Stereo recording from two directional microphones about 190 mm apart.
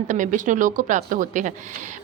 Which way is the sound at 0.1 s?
40° right (ahead or behind).